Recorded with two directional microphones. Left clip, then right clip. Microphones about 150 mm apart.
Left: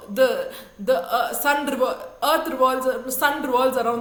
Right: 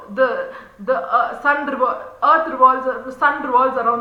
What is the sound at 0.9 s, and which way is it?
A woman's voice, 40° left (ahead or behind).